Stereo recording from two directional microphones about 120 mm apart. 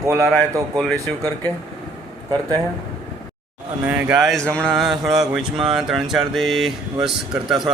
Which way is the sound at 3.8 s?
10° right (ahead or behind).